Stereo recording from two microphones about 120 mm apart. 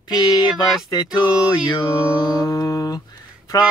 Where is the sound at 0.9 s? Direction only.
35° left (ahead or behind).